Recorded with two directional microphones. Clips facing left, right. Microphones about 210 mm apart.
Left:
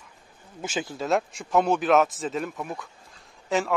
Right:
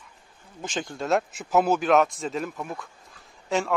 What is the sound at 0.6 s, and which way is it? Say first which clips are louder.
A man's voice: left 1 dB; 5° left (ahead or behind).